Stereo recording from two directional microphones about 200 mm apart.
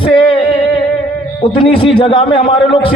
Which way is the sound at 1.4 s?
25° left (ahead or behind).